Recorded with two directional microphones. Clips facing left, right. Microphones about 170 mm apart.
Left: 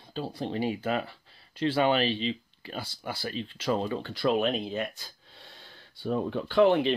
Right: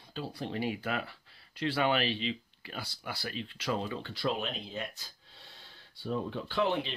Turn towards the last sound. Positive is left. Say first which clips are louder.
# left 9 dB
turn(degrees=55)  # may be behind; listen again after turning